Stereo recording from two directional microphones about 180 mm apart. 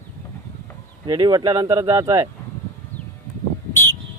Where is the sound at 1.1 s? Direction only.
20° right (ahead or behind).